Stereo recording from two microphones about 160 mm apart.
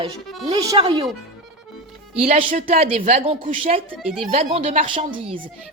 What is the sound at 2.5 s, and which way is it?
A woman's voice, 40° right (ahead or behind).